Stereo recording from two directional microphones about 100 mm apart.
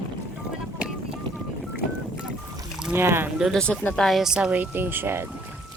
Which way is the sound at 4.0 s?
Centre (ahead or behind).